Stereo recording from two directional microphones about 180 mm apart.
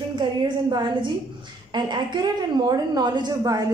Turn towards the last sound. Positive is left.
turn(degrees=-20)  # may be behind; listen again after turning